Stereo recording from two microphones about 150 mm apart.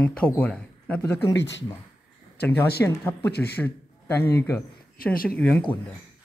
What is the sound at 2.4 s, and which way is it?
A man's voice, 10° left (ahead or behind).